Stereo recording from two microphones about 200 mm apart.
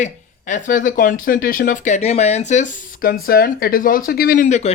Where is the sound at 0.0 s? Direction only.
40° left (ahead or behind).